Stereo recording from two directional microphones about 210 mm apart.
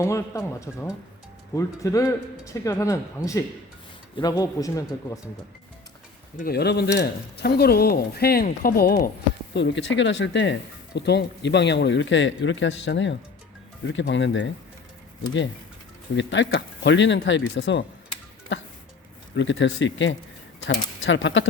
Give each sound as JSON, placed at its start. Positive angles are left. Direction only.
{"t": 0.0, "sound": "speech", "side_deg": 15}
{"t": 4.2, "sound": "speech", "side_deg": 15}
{"t": 6.3, "sound": "speech", "side_deg": 45}
{"t": 9.6, "sound": "speech", "side_deg": 60}
{"t": 16.1, "sound": "speech", "side_deg": 60}